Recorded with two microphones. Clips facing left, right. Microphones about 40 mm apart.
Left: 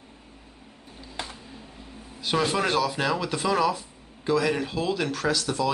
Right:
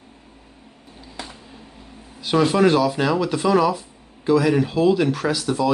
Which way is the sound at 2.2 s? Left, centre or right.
Centre.